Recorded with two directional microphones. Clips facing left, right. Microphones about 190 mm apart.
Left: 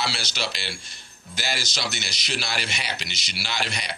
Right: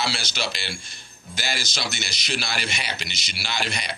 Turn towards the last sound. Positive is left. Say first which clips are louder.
# right 1 dB
turn(degrees=-50)  # may be behind; listen again after turning